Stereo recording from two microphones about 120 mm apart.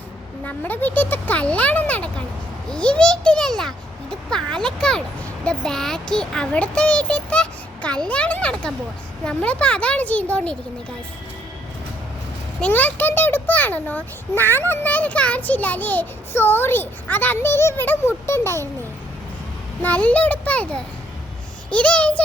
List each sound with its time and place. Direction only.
0.4 s a child's voice: 15° left (ahead or behind)
12.5 s a child's voice: 10° left (ahead or behind)
19.8 s a child's voice: 10° left (ahead or behind)